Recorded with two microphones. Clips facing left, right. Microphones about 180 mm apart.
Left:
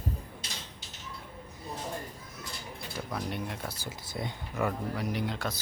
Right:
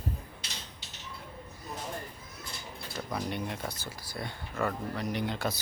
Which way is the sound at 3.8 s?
20° left (ahead or behind).